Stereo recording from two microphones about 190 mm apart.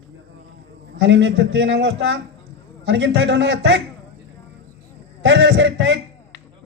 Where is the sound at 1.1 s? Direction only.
70° right (ahead or behind).